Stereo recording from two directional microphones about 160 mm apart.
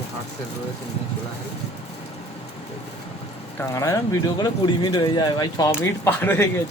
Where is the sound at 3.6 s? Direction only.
20° left (ahead or behind).